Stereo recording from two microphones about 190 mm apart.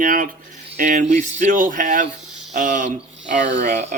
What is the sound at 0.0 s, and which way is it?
Speech, 45° right (ahead or behind).